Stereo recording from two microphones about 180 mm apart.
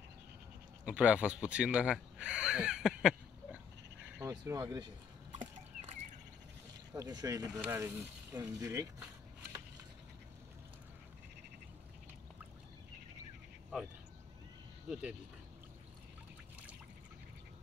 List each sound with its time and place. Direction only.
0.8 s speech: 5° right (ahead or behind)
4.2 s speech: 15° right (ahead or behind)
5.3 s chicken: 35° right (ahead or behind)
6.9 s speech: 20° right (ahead or behind)
14.9 s speech: 5° right (ahead or behind)